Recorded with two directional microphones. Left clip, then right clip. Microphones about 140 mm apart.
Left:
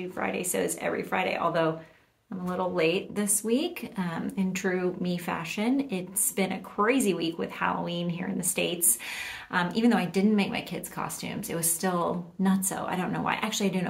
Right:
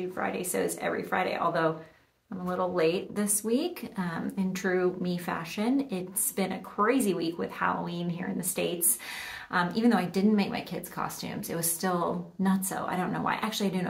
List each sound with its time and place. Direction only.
0.2 s a woman's voice: 15° left (ahead or behind)